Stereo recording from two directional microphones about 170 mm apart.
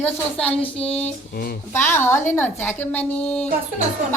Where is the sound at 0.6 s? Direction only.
35° left (ahead or behind).